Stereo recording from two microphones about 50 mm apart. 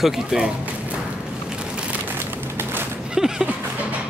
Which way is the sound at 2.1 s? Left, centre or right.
Right.